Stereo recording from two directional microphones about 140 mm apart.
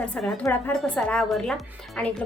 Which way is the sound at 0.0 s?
Centre (ahead or behind).